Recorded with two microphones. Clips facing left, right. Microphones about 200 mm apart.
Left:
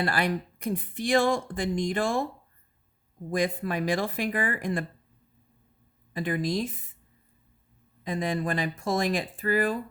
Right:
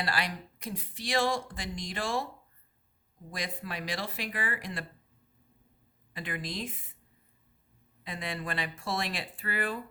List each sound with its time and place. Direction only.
0.0 s speech: 50° left (ahead or behind)
3.2 s speech: 50° left (ahead or behind)
6.1 s speech: 45° left (ahead or behind)
8.0 s speech: 45° left (ahead or behind)